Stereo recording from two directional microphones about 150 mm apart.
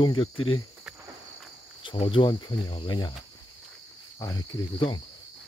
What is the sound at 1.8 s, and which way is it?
Speech, 35° left (ahead or behind).